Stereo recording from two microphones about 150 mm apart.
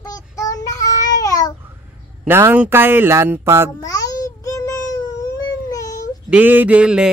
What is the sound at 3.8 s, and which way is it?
Babbling, 25° left (ahead or behind).